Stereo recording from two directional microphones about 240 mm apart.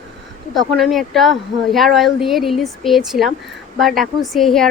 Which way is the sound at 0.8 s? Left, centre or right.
Centre.